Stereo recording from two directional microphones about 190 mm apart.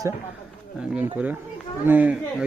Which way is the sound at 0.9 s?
5° right (ahead or behind).